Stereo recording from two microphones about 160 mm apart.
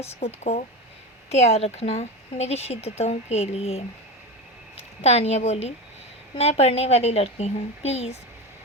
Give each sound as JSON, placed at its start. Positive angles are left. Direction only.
{"t": 1.3, "sound": "a woman's voice", "side_deg": 40}
{"t": 5.0, "sound": "a woman's voice", "side_deg": 40}